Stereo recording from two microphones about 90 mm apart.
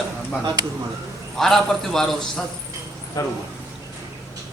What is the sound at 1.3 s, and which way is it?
Speech, 5° left (ahead or behind).